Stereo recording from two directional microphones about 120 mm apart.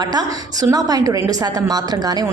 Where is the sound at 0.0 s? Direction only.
35° right (ahead or behind).